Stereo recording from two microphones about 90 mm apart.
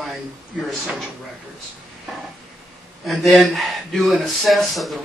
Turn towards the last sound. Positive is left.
turn(degrees=0)  # may be behind; listen again after turning